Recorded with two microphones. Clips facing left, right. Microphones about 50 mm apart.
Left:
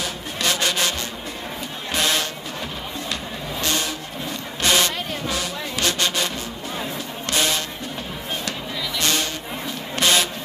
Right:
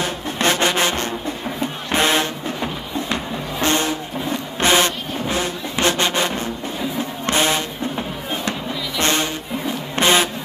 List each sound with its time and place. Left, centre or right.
0.0 s music: right
1.9 s vehicle: right
7.2 s music: right
9.0 s music: right
9.9 s vehicle: right